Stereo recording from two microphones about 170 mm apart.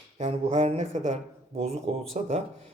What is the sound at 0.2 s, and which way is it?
Speech, 35° right (ahead or behind).